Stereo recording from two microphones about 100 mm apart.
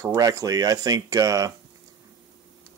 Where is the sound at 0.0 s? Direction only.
35° right (ahead or behind).